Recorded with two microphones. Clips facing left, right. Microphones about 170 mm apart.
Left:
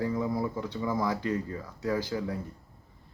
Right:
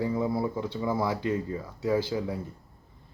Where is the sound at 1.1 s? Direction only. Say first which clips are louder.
Right 2 dB; 25° right (ahead or behind).